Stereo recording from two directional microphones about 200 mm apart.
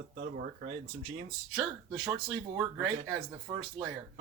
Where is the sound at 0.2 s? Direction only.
45° right (ahead or behind).